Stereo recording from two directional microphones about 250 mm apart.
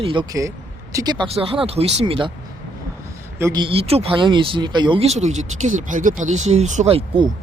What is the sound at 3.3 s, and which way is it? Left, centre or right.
Speech, centre.